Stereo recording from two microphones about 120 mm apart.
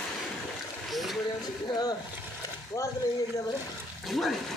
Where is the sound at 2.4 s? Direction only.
30° left (ahead or behind).